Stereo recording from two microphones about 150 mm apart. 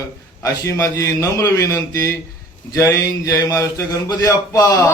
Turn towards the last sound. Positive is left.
turn(degrees=20)  # may be behind; listen again after turning